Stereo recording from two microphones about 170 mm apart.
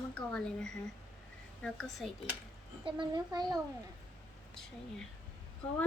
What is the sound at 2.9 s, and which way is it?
Speech, 25° right (ahead or behind).